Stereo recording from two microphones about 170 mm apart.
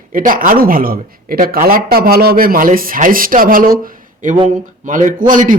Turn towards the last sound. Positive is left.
turn(degrees=-50)  # may be behind; listen again after turning